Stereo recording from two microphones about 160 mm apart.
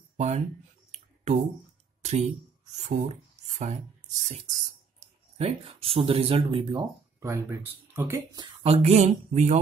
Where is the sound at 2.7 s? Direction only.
45° right (ahead or behind).